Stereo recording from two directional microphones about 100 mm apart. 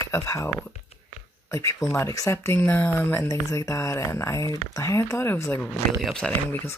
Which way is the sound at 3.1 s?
30° left (ahead or behind).